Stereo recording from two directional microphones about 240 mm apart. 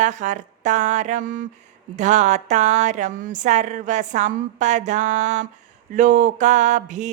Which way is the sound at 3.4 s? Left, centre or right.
Right.